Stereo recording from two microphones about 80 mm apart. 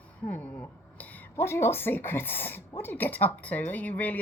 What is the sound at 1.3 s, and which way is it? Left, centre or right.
Speech, left.